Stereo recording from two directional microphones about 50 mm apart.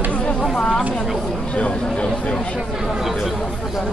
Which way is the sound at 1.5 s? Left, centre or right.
Left.